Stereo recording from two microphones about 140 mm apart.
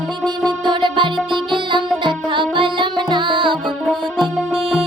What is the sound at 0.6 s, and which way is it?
Music, 35° right (ahead or behind).